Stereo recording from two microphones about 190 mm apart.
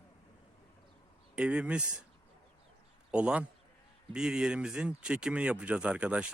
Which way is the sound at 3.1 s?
5° right (ahead or behind).